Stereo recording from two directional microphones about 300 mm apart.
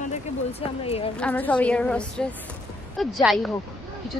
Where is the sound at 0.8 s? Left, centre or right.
Centre.